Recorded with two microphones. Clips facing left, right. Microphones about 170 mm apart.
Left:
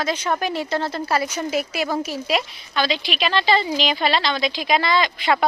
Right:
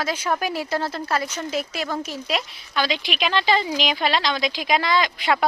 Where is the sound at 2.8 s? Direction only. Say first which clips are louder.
Left 2 dB; 10° right (ahead or behind).